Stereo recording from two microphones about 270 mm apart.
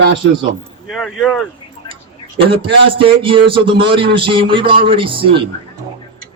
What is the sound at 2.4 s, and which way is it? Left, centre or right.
A man's voice, centre.